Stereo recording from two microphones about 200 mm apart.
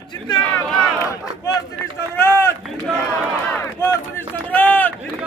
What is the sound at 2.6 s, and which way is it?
Run, centre (ahead or behind).